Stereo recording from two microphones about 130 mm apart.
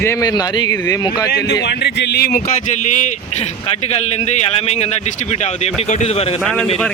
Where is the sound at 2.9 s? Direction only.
70° left (ahead or behind).